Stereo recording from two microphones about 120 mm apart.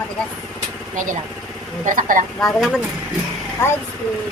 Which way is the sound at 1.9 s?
90° right.